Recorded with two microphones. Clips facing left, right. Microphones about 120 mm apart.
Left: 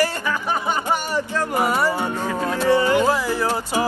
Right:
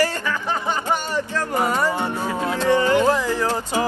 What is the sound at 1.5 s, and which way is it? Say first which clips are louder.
Music: even; 10° left (ahead or behind).